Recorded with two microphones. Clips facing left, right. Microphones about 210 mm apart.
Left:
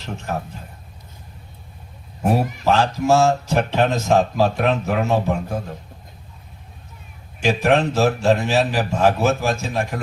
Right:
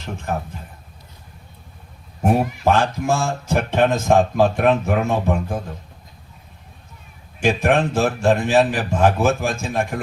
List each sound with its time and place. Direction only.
0.3 s speech: 50° right (ahead or behind)
2.6 s speech: 50° right (ahead or behind)
7.4 s speech: 50° right (ahead or behind)